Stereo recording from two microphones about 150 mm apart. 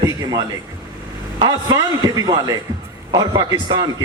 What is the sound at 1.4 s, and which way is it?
A man's voice, 25° right (ahead or behind).